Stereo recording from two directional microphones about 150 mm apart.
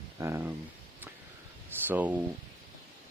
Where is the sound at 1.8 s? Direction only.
10° right (ahead or behind).